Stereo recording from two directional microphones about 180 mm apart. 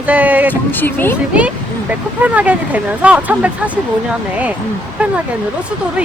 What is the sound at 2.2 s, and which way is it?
Speech, 10° right (ahead or behind).